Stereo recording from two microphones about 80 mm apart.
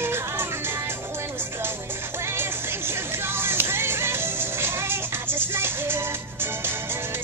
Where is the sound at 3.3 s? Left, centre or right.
Right.